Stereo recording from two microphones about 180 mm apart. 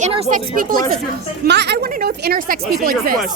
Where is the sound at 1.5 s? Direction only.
70° right (ahead or behind).